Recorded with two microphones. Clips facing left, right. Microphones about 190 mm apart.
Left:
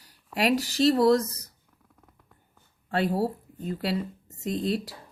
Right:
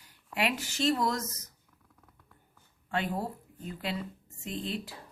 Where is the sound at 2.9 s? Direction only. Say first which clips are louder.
Left 7 dB; 35° left (ahead or behind).